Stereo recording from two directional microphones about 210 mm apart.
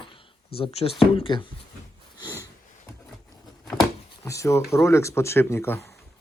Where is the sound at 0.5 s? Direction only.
25° left (ahead or behind).